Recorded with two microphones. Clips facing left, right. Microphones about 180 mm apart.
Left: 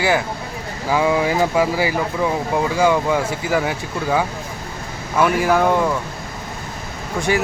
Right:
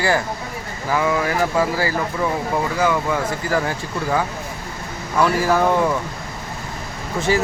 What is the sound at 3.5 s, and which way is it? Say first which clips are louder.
Speech: left 2 dB; 5° left (ahead or behind).